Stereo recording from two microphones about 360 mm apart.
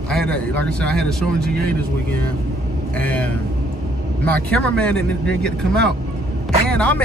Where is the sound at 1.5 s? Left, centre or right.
Right.